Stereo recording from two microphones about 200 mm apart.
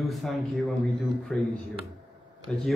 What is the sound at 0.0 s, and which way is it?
A man's voice, centre (ahead or behind).